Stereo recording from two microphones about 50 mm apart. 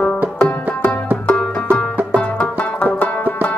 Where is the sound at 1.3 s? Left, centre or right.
Left.